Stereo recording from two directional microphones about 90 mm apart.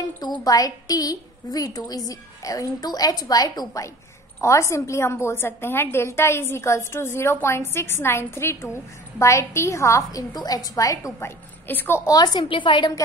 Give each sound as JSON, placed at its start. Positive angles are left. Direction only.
{"t": 0.2, "sound": "a woman's voice", "side_deg": 50}
{"t": 10.3, "sound": "a woman's voice", "side_deg": 45}
{"t": 11.1, "sound": "a woman's voice", "side_deg": 25}
{"t": 12.4, "sound": "a woman's voice", "side_deg": 65}